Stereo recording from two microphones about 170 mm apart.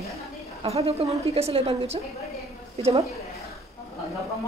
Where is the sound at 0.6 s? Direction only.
35° right (ahead or behind).